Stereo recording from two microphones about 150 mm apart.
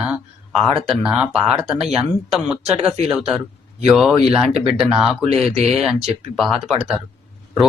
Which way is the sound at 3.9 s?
Centre (ahead or behind).